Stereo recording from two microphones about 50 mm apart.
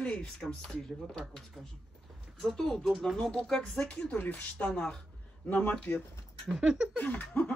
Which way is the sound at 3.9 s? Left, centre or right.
Left.